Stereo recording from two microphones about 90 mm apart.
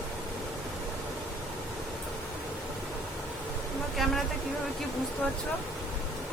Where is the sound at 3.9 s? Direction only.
Centre (ahead or behind).